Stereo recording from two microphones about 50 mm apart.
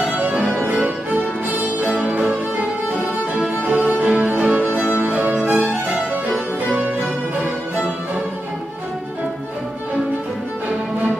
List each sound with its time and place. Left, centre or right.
0.2 s music: right
6.7 s music: right